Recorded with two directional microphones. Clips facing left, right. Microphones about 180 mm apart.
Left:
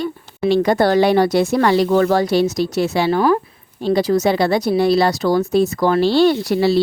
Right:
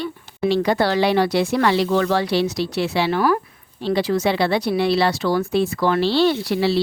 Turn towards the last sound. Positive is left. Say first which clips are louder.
# left 4 dB
turn(degrees=45)  # may be behind; listen again after turning